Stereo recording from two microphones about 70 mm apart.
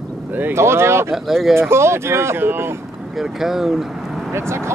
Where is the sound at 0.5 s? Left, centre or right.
Right.